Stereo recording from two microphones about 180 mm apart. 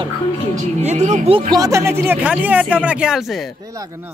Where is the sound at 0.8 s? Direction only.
40° right (ahead or behind); by 3.5 s centre (ahead or behind).